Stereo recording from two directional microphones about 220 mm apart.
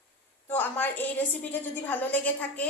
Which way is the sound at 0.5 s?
10° left (ahead or behind).